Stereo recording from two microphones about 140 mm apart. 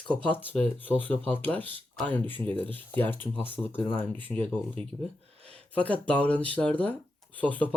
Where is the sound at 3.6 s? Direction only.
15° left (ahead or behind).